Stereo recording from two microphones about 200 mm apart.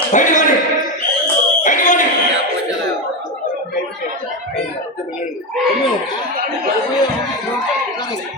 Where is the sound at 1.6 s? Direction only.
40° left (ahead or behind).